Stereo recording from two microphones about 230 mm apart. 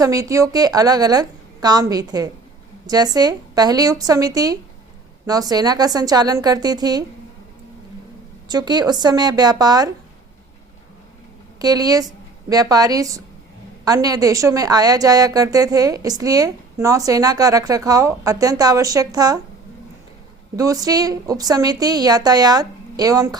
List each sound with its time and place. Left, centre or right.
0.0 s a woman's voice: centre
8.4 s a woman's voice: centre
11.6 s a woman's voice: centre
20.6 s a woman's voice: centre